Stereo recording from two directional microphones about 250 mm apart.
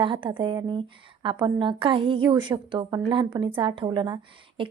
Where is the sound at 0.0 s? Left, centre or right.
Centre.